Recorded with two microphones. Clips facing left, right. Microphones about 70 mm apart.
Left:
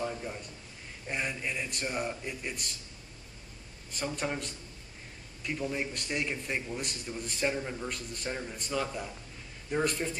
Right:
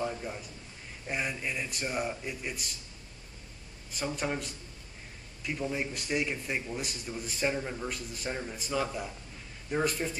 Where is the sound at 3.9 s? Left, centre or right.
Centre.